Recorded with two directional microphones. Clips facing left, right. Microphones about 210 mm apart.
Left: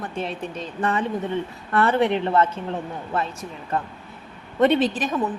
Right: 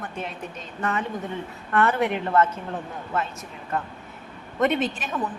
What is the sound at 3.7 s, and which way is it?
A woman's voice, 30° left (ahead or behind).